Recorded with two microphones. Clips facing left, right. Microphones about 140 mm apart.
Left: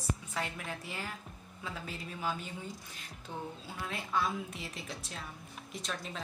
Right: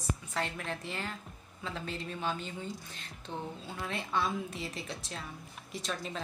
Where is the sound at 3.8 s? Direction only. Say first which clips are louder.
Right 1 dB; centre (ahead or behind).